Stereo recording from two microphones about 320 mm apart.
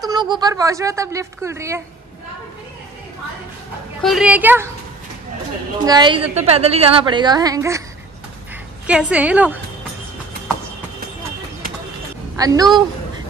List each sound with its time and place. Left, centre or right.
0.0 s a woman's voice: centre
4.0 s a woman's voice: centre
5.9 s a woman's voice: centre
8.8 s a woman's voice: centre
12.4 s a woman's voice: centre